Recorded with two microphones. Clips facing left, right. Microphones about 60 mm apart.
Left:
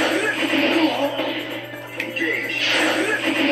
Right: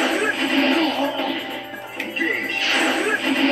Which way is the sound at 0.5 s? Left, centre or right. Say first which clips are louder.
Left 1 dB; centre.